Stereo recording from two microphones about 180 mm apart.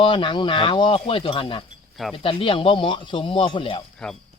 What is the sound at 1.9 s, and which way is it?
Speech, centre (ahead or behind).